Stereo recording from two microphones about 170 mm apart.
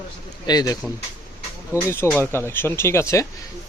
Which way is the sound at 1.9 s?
15° left (ahead or behind).